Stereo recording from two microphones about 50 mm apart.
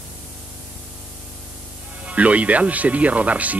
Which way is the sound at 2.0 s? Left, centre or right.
Right.